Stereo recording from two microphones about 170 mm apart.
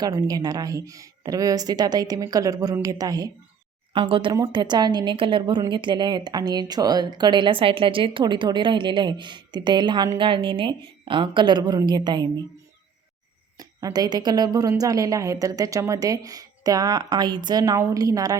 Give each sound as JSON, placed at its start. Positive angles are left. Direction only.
{"t": 0.0, "sound": "a woman's voice", "side_deg": -25}
{"t": 13.6, "sound": "a woman's voice", "side_deg": -20}